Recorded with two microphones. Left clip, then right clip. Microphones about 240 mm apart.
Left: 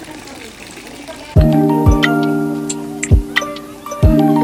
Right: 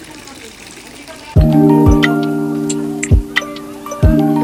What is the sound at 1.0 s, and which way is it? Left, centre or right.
Music, centre.